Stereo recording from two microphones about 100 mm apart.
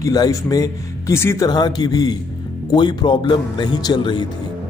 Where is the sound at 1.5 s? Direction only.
45° left (ahead or behind).